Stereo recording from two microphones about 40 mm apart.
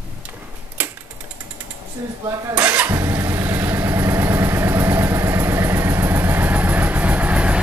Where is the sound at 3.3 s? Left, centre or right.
Right.